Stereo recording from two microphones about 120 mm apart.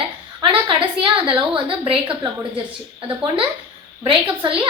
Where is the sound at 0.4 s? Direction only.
45° right (ahead or behind).